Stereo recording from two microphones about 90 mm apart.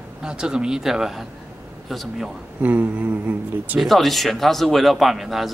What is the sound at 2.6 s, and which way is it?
Speech, 20° right (ahead or behind).